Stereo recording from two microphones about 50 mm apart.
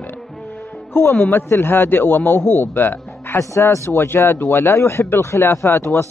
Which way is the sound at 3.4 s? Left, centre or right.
Left.